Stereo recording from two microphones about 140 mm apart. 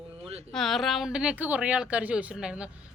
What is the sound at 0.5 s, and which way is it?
Speech, centre (ahead or behind).